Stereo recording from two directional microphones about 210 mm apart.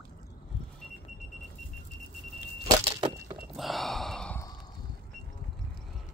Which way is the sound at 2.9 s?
20° right (ahead or behind).